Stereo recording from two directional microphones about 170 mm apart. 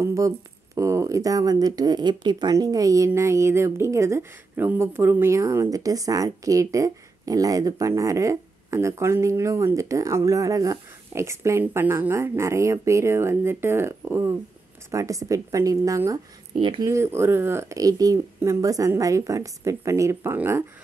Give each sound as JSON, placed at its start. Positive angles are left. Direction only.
{"t": 0.0, "sound": "a sound", "side_deg": -20}
{"t": 0.7, "sound": "speech", "side_deg": -15}
{"t": 16.5, "sound": "speech", "side_deg": -30}
{"t": 16.8, "sound": "speech", "side_deg": -15}